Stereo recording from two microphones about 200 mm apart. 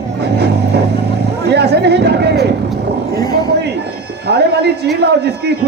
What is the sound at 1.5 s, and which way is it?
A man's voice, 55° right (ahead or behind).